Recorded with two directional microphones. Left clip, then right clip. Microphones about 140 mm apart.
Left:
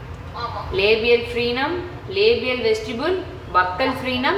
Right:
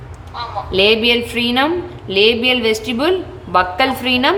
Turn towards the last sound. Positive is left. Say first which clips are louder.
# right 6 dB
turn(degrees=-35)  # may be behind; listen again after turning